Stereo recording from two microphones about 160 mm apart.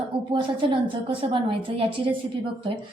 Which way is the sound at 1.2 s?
35° right (ahead or behind).